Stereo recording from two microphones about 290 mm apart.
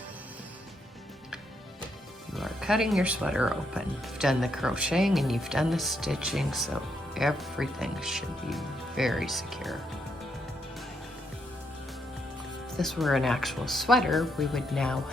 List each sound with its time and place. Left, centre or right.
2.3 s speech: centre
12.7 s speech: centre